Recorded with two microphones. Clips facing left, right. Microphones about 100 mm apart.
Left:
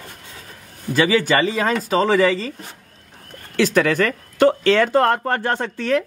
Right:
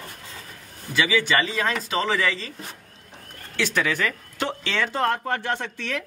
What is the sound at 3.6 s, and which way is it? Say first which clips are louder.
Speech: left 7 dB; 45° left (ahead or behind).